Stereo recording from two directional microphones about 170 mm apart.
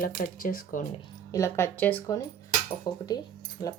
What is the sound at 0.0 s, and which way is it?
Speech, 55° left (ahead or behind).